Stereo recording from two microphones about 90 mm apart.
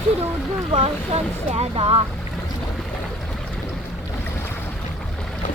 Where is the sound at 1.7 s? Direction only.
90° right.